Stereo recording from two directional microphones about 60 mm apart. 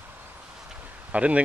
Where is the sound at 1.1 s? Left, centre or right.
Right.